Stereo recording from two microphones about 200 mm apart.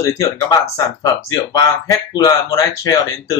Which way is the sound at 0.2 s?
15° left (ahead or behind).